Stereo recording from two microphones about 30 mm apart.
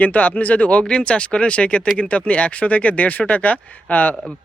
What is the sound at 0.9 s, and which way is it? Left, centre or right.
Speech, left.